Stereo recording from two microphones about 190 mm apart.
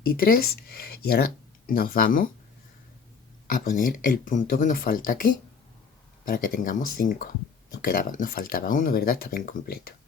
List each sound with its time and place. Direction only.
0.0 s speech: 50° left (ahead or behind)
3.4 s speech: 45° left (ahead or behind)